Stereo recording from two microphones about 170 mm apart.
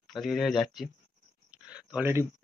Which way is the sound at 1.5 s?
5° right (ahead or behind).